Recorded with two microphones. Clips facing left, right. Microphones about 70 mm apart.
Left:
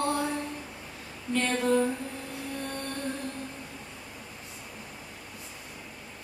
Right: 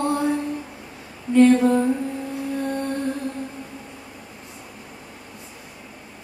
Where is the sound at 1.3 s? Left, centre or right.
Centre.